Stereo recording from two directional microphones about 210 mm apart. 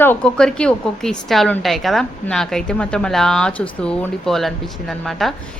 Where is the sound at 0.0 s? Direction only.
5° left (ahead or behind).